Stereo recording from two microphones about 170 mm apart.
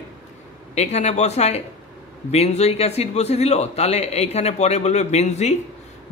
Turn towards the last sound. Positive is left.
turn(degrees=40)  # may be behind; listen again after turning